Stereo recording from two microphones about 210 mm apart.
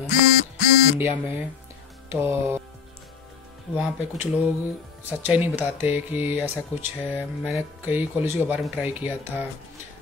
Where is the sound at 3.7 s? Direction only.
5° right (ahead or behind).